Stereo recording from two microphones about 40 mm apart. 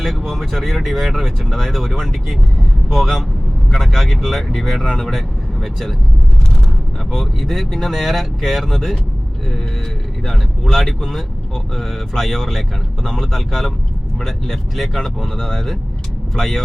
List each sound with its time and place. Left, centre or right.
0.3 s speech: centre
7.1 s speech: centre
10.2 s speech: centre